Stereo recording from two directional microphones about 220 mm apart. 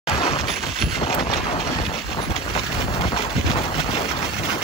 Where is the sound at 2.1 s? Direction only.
25° left (ahead or behind).